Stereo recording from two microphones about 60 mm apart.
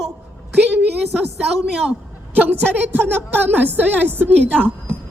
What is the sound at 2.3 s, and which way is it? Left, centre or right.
A woman's voice, right.